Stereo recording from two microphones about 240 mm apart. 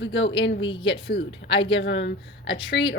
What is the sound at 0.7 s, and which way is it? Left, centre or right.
Speech, left.